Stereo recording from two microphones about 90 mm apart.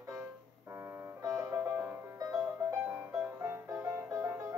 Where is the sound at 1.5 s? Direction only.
20° right (ahead or behind).